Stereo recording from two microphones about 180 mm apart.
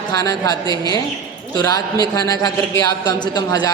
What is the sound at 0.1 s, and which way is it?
Speech, 20° left (ahead or behind).